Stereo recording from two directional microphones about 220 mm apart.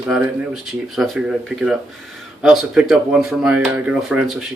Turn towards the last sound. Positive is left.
turn(degrees=0)  # may be behind; listen again after turning